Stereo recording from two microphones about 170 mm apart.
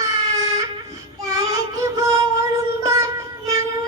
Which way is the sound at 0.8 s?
20° right (ahead or behind).